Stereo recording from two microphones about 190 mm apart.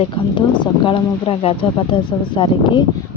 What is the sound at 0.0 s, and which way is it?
Speech, 25° left (ahead or behind).